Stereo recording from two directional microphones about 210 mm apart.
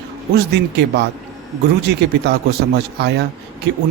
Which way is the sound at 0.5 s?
55° right (ahead or behind).